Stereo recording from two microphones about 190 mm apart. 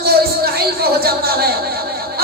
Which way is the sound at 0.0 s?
55° right (ahead or behind).